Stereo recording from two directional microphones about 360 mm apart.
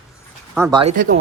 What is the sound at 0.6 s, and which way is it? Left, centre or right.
Speech, centre.